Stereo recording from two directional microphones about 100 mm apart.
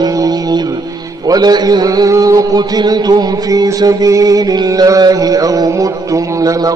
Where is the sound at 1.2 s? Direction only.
40° right (ahead or behind).